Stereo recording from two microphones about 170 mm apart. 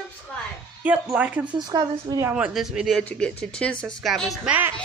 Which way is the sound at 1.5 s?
25° right (ahead or behind).